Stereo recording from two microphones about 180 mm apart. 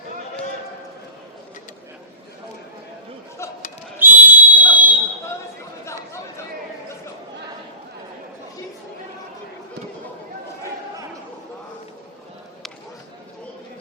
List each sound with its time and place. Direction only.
3.9 s fire alarm: 10° right (ahead or behind)
5.8 s chatter: 15° left (ahead or behind)